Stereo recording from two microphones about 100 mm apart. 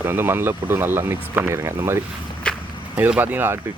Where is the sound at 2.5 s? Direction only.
10° left (ahead or behind).